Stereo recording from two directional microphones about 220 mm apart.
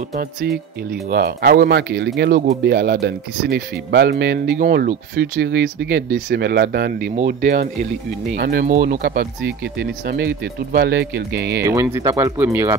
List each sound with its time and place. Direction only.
1.1 s speech: 45° right (ahead or behind)
11.6 s speech: 15° right (ahead or behind)